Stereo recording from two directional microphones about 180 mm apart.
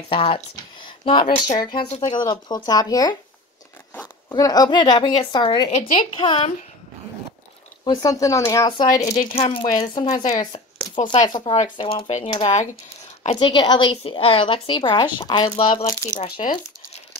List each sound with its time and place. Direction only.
0.1 s a woman's voice: 30° left (ahead or behind)
4.3 s a woman's voice: 20° left (ahead or behind)
7.8 s a woman's voice: 20° left (ahead or behind)
9.0 s speech: 40° left (ahead or behind)
10.3 s a woman's voice: 25° left (ahead or behind)
16.1 s speech: 40° left (ahead or behind)